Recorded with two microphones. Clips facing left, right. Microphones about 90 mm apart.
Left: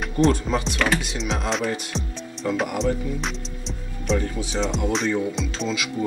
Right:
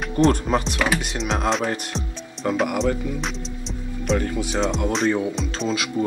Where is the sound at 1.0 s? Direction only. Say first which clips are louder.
Right 3 dB; 45° right (ahead or behind).